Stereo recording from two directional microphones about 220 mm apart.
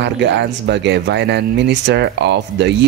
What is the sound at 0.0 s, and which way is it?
Speech, 50° right (ahead or behind).